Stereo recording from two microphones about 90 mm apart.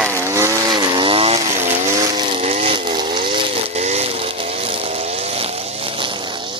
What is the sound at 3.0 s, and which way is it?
Chainsaw, 65° right (ahead or behind).